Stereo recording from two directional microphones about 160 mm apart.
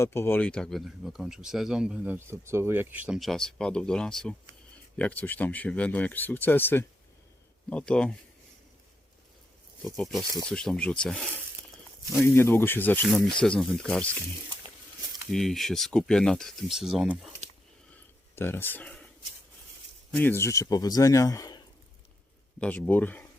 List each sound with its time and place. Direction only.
0.0 s speech: 15° left (ahead or behind); by 2.1 s 5° right (ahead or behind)
2.1 s speech: 15° right (ahead or behind); by 8.1 s 5° left (ahead or behind)
10.0 s speech: centre (ahead or behind)
15.3 s speech: centre (ahead or behind)
18.3 s speech: 15° left (ahead or behind)
20.1 s a man's voice: 15° left (ahead or behind)
22.6 s speech: 10° left (ahead or behind)